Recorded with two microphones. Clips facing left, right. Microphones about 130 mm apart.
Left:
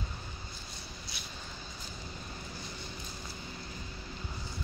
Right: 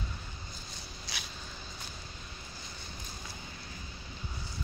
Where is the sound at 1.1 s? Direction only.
90° right.